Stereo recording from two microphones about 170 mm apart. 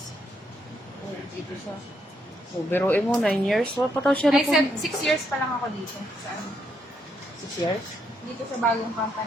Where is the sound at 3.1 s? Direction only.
Centre (ahead or behind).